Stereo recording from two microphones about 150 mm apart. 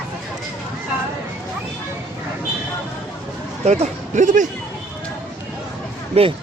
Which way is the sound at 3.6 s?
50° right (ahead or behind).